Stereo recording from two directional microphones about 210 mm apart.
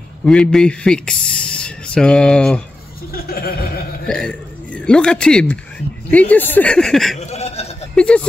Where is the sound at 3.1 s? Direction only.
45° left (ahead or behind).